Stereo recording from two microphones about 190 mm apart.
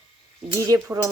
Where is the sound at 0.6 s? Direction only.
15° right (ahead or behind).